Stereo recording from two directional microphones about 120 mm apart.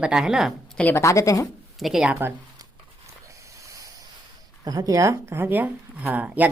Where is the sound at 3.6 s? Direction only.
25° right (ahead or behind).